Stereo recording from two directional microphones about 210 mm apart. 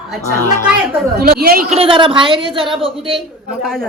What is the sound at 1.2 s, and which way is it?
Speech, 45° right (ahead or behind).